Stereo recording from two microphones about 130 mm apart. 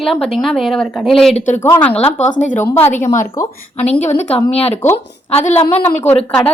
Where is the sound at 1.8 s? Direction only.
15° left (ahead or behind).